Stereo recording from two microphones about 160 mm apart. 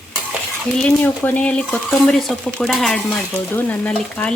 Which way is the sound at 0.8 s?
10° left (ahead or behind).